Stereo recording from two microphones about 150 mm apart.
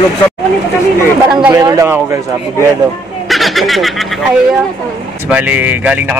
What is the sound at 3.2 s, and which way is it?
Speech, centre (ahead or behind).